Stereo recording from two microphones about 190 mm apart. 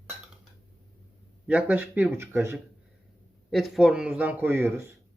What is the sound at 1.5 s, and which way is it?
Speech, 10° right (ahead or behind).